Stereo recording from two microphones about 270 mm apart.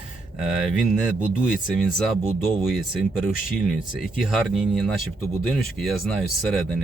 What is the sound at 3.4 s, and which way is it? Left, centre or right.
Speech, left.